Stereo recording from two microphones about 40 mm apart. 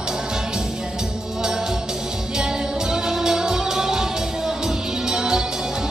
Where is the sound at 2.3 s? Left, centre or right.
Centre.